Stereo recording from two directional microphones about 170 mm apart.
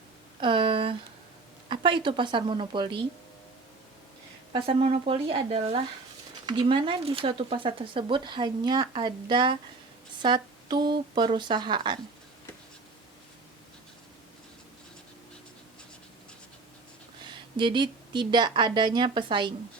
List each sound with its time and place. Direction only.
0.3 s a sound: 30° right (ahead or behind)
1.6 s speech: 30° right (ahead or behind)
4.5 s speech: 35° right (ahead or behind)
17.6 s speech: 25° right (ahead or behind)